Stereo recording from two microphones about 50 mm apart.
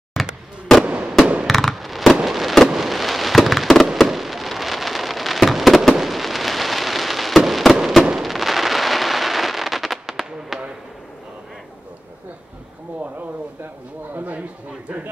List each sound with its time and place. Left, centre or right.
0.1 s fireworks: centre
0.8 s fireworks: right
1.5 s fireworks: centre
14.1 s a sound: right